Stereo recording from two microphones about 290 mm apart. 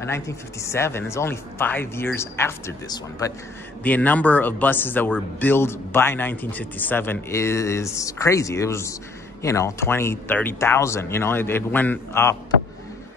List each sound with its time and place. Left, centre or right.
0.0 s speech: centre